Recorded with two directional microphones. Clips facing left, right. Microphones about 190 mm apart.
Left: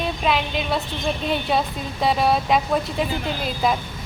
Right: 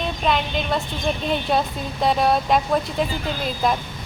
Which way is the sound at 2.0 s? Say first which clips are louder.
Right 1 dB; centre (ahead or behind).